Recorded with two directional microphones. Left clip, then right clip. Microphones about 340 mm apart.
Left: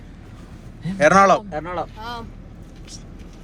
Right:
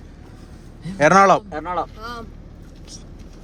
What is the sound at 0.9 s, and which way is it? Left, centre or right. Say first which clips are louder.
Speech: right 1 dB; centre.